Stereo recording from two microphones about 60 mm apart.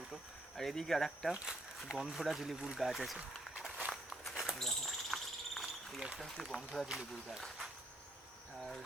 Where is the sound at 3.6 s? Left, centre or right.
Centre.